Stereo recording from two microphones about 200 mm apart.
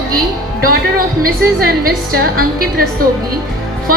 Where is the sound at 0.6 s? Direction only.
45° right (ahead or behind).